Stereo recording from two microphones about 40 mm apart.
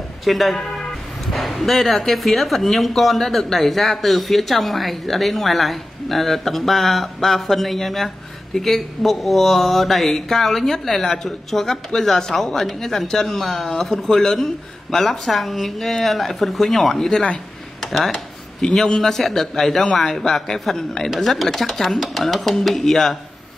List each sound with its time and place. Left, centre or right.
0.2 s speech: centre
18.1 s a sound: centre
18.9 s a man's voice: centre